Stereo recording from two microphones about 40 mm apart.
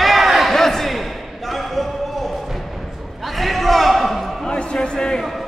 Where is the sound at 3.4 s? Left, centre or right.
Centre.